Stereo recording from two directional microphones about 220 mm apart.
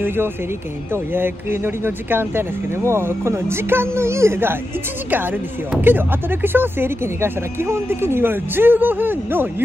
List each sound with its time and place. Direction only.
0.0 s speech: 10° right (ahead or behind)